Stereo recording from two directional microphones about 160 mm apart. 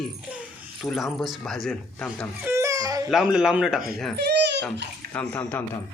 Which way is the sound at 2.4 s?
20° right (ahead or behind).